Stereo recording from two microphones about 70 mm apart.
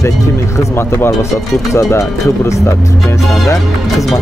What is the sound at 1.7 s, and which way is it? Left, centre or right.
Speech, left.